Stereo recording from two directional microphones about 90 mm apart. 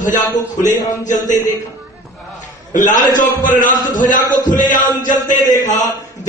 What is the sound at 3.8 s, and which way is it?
A man's voice, 45° left (ahead or behind).